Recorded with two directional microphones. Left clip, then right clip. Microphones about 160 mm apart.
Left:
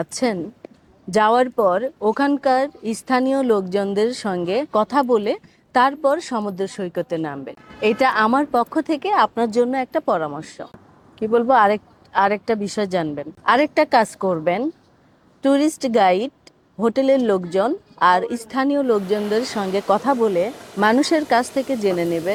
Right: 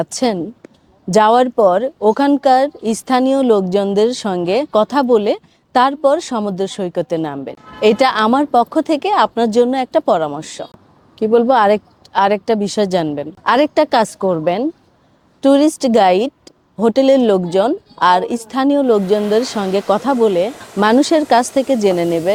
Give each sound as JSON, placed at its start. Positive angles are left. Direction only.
{"t": 0.0, "sound": "a woman's voice", "side_deg": -30}